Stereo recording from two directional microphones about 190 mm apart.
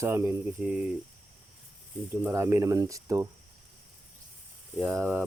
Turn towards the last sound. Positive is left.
turn(degrees=-10)  # may be behind; listen again after turning